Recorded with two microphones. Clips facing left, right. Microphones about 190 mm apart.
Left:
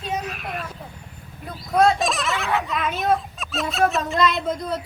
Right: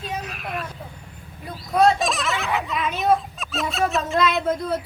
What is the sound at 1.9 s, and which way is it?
Fowl, centre (ahead or behind).